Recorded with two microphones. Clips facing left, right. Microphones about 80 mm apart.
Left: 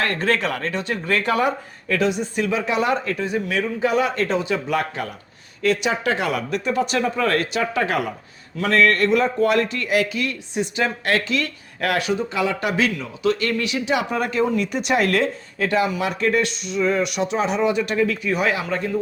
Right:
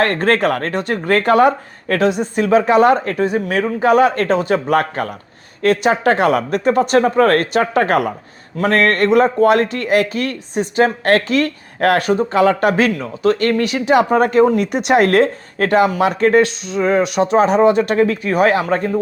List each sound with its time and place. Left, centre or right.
0.0 s a man's voice: right
14.7 s a man's voice: right